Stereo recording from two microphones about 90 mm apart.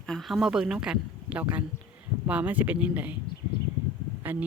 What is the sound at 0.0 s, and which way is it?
Speech, 5° left (ahead or behind).